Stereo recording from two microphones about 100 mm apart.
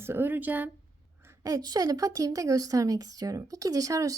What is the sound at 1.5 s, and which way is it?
Speech, 40° right (ahead or behind).